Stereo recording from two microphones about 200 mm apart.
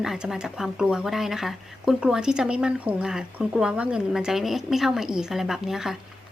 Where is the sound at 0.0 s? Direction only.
Centre (ahead or behind).